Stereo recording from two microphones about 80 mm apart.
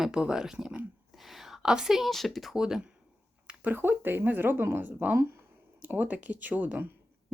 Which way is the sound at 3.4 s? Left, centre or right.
Right.